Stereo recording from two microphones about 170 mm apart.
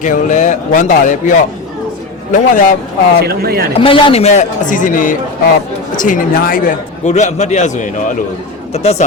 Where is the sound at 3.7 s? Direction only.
30° left (ahead or behind).